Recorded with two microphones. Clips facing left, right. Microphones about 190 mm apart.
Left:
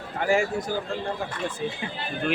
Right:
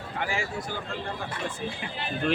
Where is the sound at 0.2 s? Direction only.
45° left (ahead or behind).